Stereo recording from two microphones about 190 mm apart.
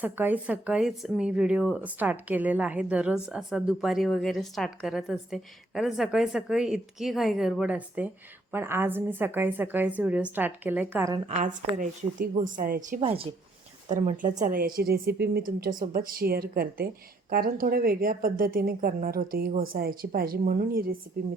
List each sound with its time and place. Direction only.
0.0 s a woman's voice: 10° right (ahead or behind)
11.3 s a woman's voice: 40° right (ahead or behind)
13.0 s speech: 30° right (ahead or behind)
13.9 s a woman's voice: 40° right (ahead or behind)